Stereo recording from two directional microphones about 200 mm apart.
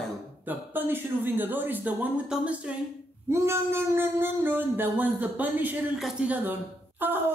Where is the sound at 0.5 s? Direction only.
10° right (ahead or behind).